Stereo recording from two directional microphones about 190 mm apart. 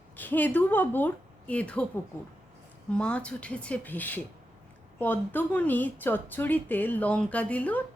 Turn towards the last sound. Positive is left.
turn(degrees=10)  # may be behind; listen again after turning